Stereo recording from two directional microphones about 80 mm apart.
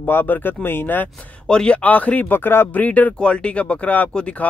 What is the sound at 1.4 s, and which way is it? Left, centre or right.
Speech, centre.